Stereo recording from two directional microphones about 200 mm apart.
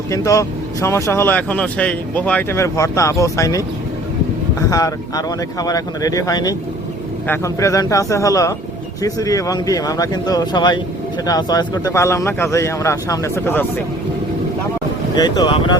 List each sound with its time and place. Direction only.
0.1 s speech: 15° left (ahead or behind)
4.7 s speech: 15° left (ahead or behind)
15.1 s speech: 20° left (ahead or behind)